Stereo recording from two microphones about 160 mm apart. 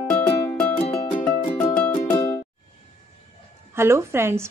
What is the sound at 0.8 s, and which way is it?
Music, 50° left (ahead or behind).